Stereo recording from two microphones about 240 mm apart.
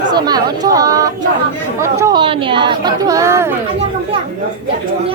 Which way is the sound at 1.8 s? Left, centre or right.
Centre.